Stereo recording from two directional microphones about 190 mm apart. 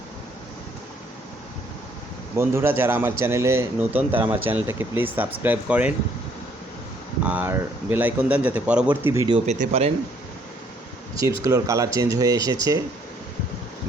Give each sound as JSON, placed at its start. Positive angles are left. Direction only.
{"t": 2.3, "sound": "a man's voice", "side_deg": -10}
{"t": 7.3, "sound": "a man's voice", "side_deg": -10}
{"t": 9.1, "sound": "speech", "side_deg": -25}
{"t": 11.1, "sound": "a man's voice", "side_deg": -15}